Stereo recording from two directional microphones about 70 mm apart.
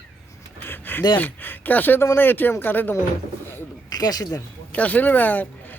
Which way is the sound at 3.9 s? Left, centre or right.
Left.